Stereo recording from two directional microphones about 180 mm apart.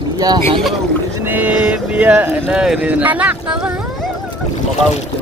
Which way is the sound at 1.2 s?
10° right (ahead or behind).